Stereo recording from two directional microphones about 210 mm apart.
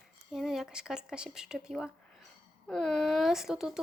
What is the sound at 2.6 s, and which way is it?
Speech, 5° left (ahead or behind).